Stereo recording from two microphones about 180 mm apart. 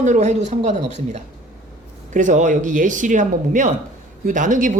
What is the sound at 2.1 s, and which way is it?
Speech, 45° right (ahead or behind).